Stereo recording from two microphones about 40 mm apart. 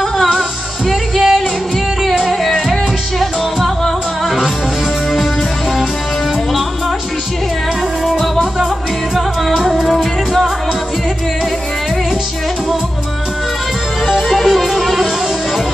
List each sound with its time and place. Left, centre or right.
0.8 s music: centre
2.4 s music: centre
9.1 s music: centre
14.0 s music: centre